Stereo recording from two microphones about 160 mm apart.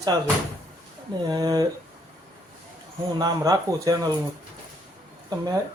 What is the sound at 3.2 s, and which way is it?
Speech, 25° right (ahead or behind).